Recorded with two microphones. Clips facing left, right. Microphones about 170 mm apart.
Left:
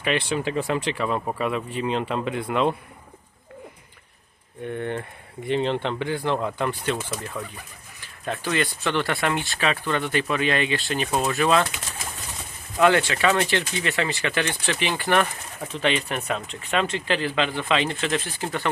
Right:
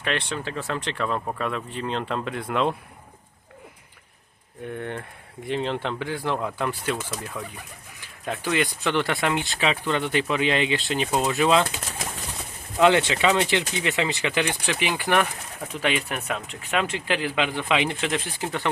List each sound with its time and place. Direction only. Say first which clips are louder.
0.0 s speech: left 4 dB; 5° left (ahead or behind)
4.6 s speech: left 3 dB; 5° right (ahead or behind); by 11.7 s 20° right (ahead or behind)
12.8 s speech: even; 20° right (ahead or behind)